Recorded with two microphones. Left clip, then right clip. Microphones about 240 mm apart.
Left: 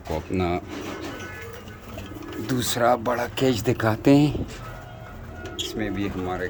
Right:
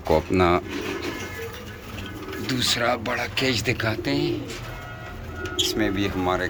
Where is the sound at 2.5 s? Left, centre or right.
Left.